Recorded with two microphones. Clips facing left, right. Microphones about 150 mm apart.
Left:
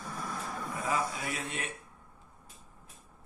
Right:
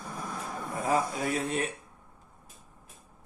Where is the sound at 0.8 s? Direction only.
45° right (ahead or behind).